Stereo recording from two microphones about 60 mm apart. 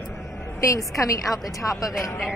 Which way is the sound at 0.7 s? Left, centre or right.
Left.